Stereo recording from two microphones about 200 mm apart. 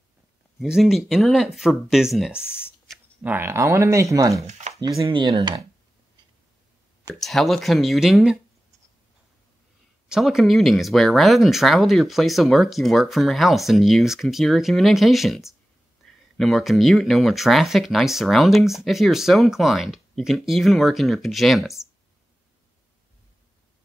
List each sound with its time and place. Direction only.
0.6 s speech: centre (ahead or behind)
2.4 s speech: 10° left (ahead or behind)
2.9 s speech: 5° right (ahead or behind); by 5.7 s 25° right (ahead or behind)
7.2 s speech: centre (ahead or behind)
10.0 s speech: centre (ahead or behind)
16.0 s a sound: centre (ahead or behind)
16.3 s speech: centre (ahead or behind)